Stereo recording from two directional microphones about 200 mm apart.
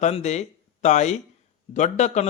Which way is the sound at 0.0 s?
35° left (ahead or behind).